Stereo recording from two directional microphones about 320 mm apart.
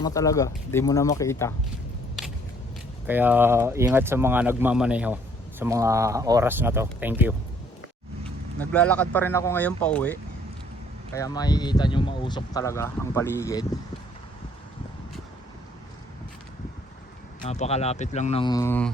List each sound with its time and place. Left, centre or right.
0.0 s speech: centre
3.1 s speech: centre
8.5 s speech: centre
17.4 s speech: centre